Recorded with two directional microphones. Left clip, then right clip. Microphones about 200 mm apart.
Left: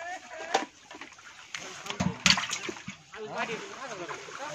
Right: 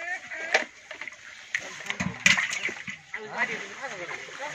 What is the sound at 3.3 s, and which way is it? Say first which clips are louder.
Speech: right 4 dB; 50° left (ahead or behind).